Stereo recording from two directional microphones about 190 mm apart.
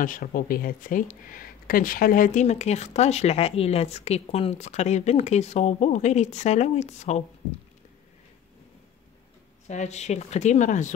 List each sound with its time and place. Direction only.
0.0 s speech: 45° left (ahead or behind)
9.7 s speech: 35° left (ahead or behind)